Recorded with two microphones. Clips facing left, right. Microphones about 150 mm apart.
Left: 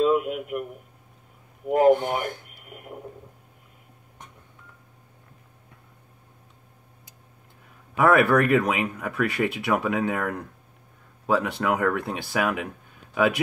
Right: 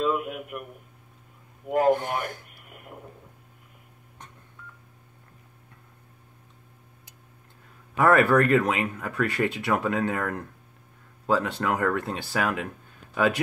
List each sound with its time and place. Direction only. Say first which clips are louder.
0.0 s a sound: left 5 dB; 20° left (ahead or behind)
1.7 s speech: left 4 dB; 20° left (ahead or behind)
7.9 s speech: left 1 dB; 10° left (ahead or behind)